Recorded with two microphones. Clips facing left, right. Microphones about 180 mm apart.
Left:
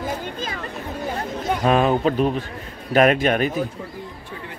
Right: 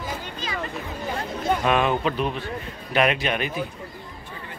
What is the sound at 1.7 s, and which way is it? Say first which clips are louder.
A man's voice: left 6 dB; 35° left (ahead or behind).